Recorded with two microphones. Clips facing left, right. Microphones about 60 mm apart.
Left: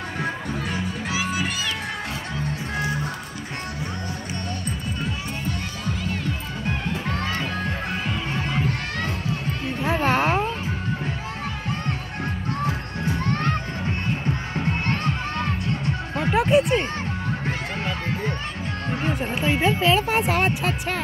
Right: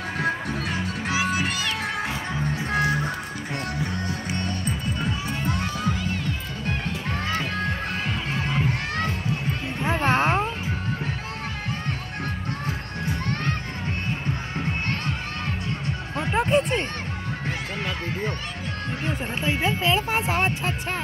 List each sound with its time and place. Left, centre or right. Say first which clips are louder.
2.7 s music: right 5 dB; right
10.0 s a sound: even; centre
16.2 s music: left 3 dB; centre
19.0 s music: left 3 dB; left